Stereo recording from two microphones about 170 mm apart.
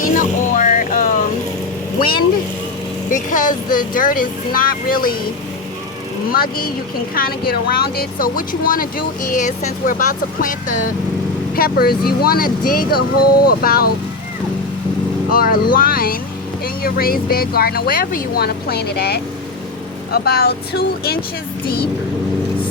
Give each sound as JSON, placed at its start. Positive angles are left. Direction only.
{"t": 0.0, "sound": "music", "side_deg": 50}
{"t": 2.0, "sound": "vehicle", "side_deg": 60}
{"t": 3.1, "sound": "speech", "side_deg": 50}
{"t": 6.3, "sound": "speech", "side_deg": 60}
{"t": 11.5, "sound": "speech", "side_deg": 60}
{"t": 15.3, "sound": "speech", "side_deg": 60}